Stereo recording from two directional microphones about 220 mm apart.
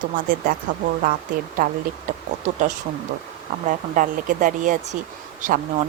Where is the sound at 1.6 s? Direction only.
40° right (ahead or behind).